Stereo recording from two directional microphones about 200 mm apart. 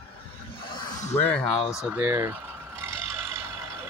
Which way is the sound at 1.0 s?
30° left (ahead or behind).